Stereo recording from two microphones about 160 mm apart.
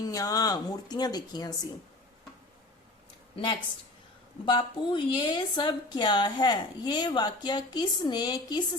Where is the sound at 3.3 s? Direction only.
30° left (ahead or behind).